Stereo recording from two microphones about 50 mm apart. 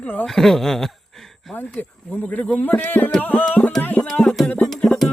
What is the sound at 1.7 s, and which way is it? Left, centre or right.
Speech, left.